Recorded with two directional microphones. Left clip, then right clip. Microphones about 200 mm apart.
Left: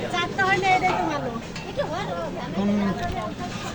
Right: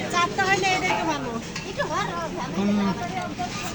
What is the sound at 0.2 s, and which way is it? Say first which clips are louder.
Vehicle: right 1 dB; 45° right (ahead or behind).